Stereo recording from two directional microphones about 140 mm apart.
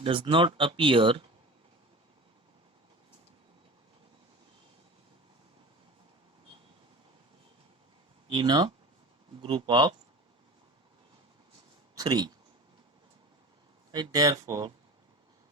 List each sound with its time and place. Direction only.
0.0 s speech: 40° right (ahead or behind)
8.4 s speech: 30° right (ahead or behind)
11.9 s speech: 30° right (ahead or behind)
13.9 s speech: 30° right (ahead or behind)